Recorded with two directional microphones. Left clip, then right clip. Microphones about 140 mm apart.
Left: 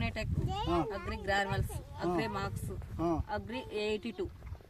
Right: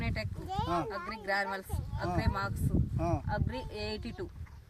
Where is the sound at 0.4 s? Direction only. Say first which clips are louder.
Even; centre (ahead or behind).